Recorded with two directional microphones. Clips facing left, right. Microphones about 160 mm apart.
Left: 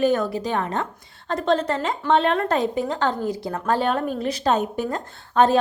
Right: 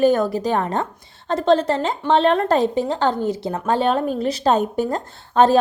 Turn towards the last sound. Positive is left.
turn(degrees=-30)  # may be behind; listen again after turning